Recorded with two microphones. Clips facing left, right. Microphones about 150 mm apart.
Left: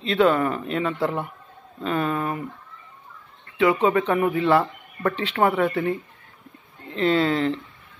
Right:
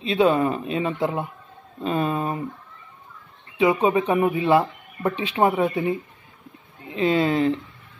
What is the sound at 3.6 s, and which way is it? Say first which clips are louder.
Speech: even; 15° right (ahead or behind).